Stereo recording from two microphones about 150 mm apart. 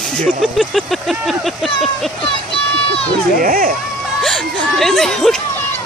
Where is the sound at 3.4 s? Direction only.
70° right (ahead or behind).